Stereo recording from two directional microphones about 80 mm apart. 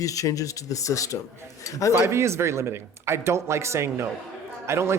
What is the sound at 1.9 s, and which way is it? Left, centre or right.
Speech, right.